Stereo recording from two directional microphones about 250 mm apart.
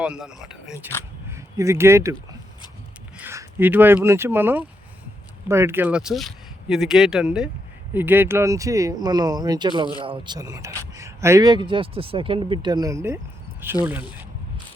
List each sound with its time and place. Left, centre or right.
0.0 s speech: centre
3.2 s speech: centre